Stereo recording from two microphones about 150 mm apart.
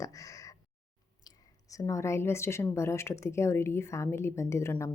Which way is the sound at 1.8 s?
20° left (ahead or behind).